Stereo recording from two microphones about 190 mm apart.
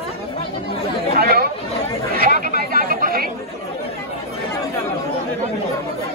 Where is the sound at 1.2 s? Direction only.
55° right (ahead or behind).